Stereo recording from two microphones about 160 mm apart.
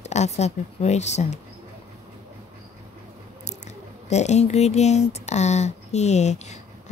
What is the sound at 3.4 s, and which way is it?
Speech, 45° left (ahead or behind).